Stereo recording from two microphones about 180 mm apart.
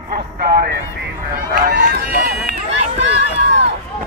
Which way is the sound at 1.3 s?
55° right (ahead or behind).